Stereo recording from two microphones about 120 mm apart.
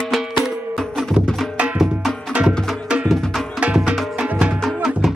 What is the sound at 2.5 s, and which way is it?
Music, 5° left (ahead or behind).